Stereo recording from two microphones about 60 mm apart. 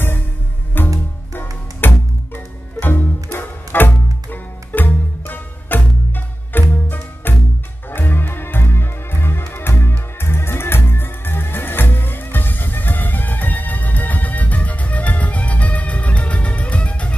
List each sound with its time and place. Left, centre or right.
0.8 s music: left